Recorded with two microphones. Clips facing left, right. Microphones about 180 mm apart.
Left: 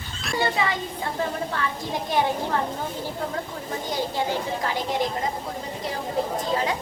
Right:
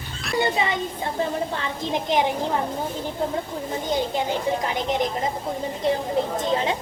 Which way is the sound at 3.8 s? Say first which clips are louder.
Right 2 dB; 20° right (ahead or behind).